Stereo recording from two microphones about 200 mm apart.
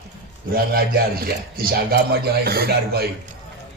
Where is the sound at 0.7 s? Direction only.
50° right (ahead or behind).